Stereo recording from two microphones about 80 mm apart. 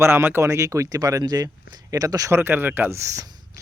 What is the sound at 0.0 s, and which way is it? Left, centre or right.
Speech, right.